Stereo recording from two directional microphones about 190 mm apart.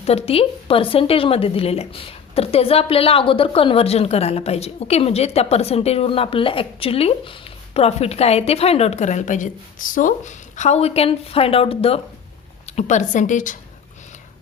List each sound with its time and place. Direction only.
0.0 s a woman's voice: 35° left (ahead or behind)